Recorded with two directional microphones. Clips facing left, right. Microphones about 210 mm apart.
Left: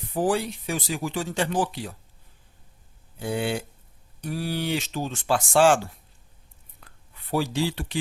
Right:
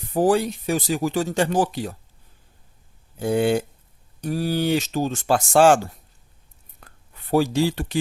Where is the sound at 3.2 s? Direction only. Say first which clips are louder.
Right 7 dB; 45° right (ahead or behind).